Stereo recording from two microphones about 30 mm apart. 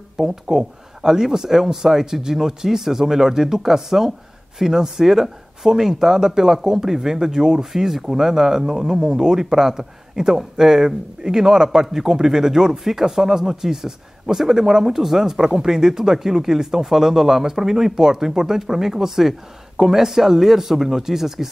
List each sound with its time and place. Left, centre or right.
0.2 s speech: centre